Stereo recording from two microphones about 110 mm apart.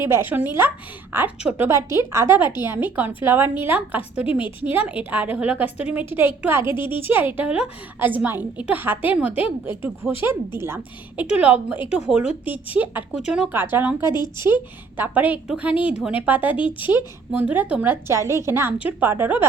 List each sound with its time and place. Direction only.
0.1 s a woman's voice: 20° right (ahead or behind)
13.5 s a woman's voice: 20° right (ahead or behind)
14.1 s speech: 40° left (ahead or behind)
14.9 s a woman's voice: 15° right (ahead or behind)
18.1 s a woman's voice: 25° right (ahead or behind)